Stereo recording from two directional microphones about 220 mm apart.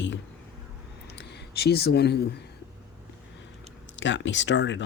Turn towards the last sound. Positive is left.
turn(degrees=55)  # may be behind; listen again after turning